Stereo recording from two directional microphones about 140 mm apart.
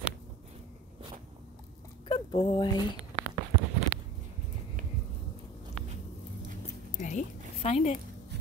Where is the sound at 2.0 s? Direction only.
35° left (ahead or behind).